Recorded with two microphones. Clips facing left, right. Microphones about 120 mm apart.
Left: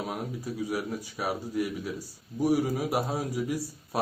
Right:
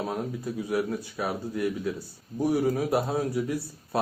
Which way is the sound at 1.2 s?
10° left (ahead or behind).